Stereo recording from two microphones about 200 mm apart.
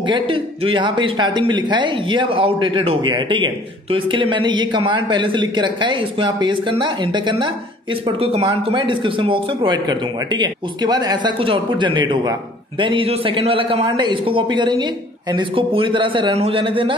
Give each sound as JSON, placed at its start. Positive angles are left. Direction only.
{"t": 0.0, "sound": "speech", "side_deg": -25}